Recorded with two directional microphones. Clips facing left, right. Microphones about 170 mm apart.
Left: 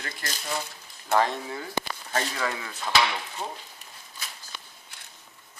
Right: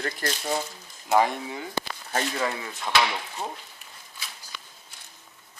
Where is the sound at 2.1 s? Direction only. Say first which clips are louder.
Right 2 dB; 25° right (ahead or behind).